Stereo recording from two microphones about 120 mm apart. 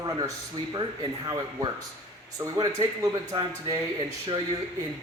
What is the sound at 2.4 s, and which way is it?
A man's voice, 25° right (ahead or behind).